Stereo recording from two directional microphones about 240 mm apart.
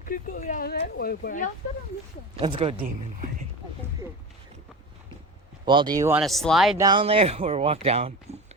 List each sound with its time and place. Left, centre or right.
0.0 s speech: left
2.4 s speech: right
5.6 s speech: centre
6.2 s speech: centre
6.7 s speech: centre